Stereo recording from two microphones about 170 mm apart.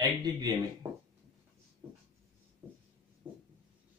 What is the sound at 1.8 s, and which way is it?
Writing, 15° right (ahead or behind).